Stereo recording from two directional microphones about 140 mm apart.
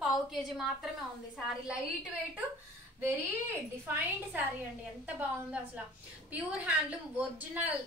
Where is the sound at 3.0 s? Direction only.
15° right (ahead or behind).